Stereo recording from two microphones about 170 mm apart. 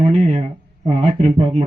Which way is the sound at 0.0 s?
40° right (ahead or behind).